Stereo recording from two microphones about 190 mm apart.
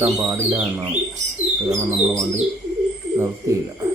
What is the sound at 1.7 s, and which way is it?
Speech, 15° right (ahead or behind).